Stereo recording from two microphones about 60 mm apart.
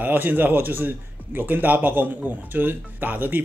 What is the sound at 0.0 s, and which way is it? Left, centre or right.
A man's voice, right.